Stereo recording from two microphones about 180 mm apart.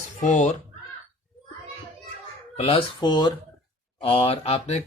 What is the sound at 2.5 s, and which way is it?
A man's voice, 35° left (ahead or behind).